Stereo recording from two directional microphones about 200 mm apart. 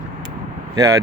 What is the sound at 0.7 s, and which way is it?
Speech, 15° right (ahead or behind).